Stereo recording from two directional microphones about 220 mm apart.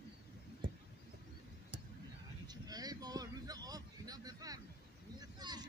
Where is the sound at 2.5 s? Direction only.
15° right (ahead or behind).